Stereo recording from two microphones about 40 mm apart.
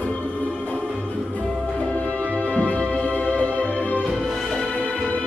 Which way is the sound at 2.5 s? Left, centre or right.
Left.